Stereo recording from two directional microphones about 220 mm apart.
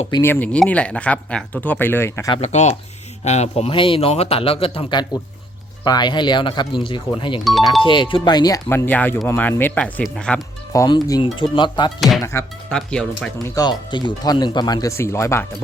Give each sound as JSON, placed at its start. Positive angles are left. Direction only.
{"t": 0.2, "sound": "speech", "side_deg": 10}
{"t": 2.4, "sound": "speech", "side_deg": 30}
{"t": 10.7, "sound": "speech", "side_deg": 15}
{"t": 11.9, "sound": "speech", "side_deg": 0}
{"t": 12.2, "sound": "speech", "side_deg": 10}
{"t": 13.6, "sound": "speech", "side_deg": 20}